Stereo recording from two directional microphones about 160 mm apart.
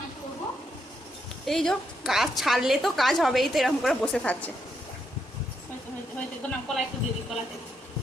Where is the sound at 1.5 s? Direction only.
Centre (ahead or behind).